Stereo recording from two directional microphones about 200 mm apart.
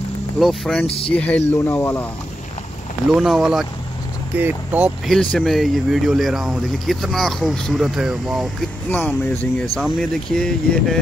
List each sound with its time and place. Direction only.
0.4 s speech: centre (ahead or behind)
0.8 s speech: 30° left (ahead or behind)
1.1 s speech: 5° left (ahead or behind)
3.1 s speech: centre (ahead or behind)